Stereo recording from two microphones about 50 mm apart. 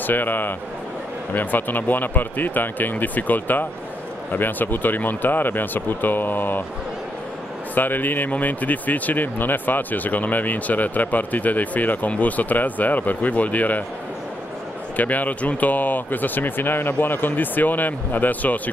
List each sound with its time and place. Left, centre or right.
0.0 s a man's voice: left
7.7 s speech: left
15.0 s speech: left